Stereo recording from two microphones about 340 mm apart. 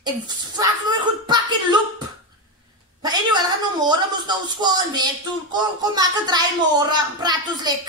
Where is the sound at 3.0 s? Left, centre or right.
Centre.